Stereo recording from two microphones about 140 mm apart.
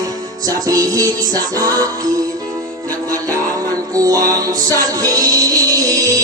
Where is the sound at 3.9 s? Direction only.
25° right (ahead or behind).